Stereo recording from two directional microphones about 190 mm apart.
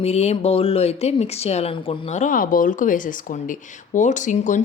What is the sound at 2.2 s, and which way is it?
Speech, 45° left (ahead or behind).